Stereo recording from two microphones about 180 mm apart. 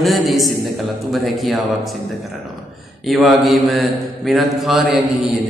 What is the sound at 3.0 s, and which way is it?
A man's voice, centre (ahead or behind).